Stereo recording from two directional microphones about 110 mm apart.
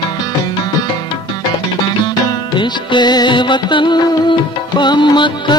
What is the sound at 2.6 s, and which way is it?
Music, 45° left (ahead or behind).